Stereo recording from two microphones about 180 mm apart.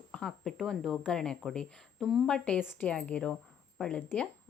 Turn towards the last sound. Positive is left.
turn(degrees=5)  # may be behind; listen again after turning